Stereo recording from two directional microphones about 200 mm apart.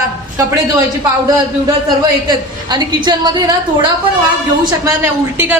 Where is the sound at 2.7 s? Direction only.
20° right (ahead or behind).